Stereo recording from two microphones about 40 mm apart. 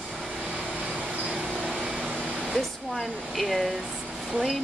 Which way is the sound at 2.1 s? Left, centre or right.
Right.